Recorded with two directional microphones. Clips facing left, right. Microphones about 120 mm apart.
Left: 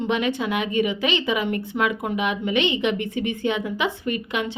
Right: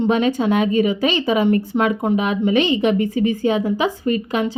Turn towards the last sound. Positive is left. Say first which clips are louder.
# right 6 dB
turn(degrees=-35)  # may be behind; listen again after turning